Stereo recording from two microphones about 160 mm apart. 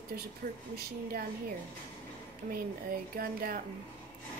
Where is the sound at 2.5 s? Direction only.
65° right (ahead or behind).